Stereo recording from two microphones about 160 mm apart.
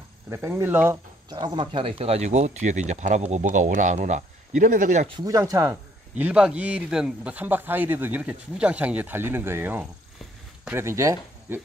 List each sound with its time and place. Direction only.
0.3 s speech: 15° right (ahead or behind)
1.3 s speech: 30° right (ahead or behind); by 5.0 s 50° right (ahead or behind)
5.0 s speech: 25° right (ahead or behind)